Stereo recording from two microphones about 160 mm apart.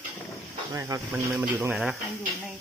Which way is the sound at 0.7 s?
20° right (ahead or behind).